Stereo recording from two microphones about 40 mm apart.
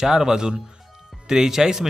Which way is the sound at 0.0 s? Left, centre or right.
Centre.